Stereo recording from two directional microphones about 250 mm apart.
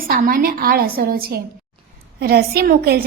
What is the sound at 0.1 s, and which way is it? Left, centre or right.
A woman's voice, right.